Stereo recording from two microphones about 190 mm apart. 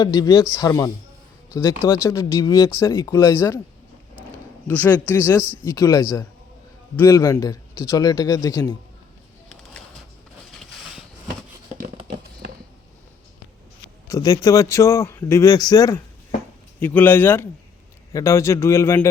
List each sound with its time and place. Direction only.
0.0 s a man's voice: 20° left (ahead or behind)
1.9 s a man's voice: 15° left (ahead or behind)
4.7 s a man's voice: 10° left (ahead or behind)
14.1 s a man's voice: 20° left (ahead or behind)